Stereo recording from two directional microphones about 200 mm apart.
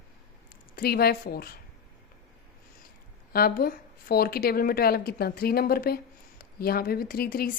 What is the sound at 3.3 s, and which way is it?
A woman's voice, 45° left (ahead or behind).